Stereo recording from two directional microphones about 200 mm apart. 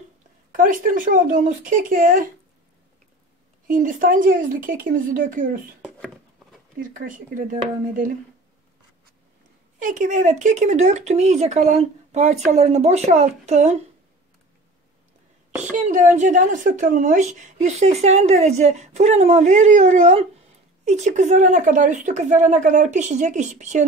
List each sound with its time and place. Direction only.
0.5 s speech: 45° right (ahead or behind)
3.6 s speech: 40° right (ahead or behind)
5.9 s a sound: centre (ahead or behind)
7.1 s speech: 40° right (ahead or behind)
9.8 s speech: 40° right (ahead or behind)
15.7 s speech: 40° right (ahead or behind)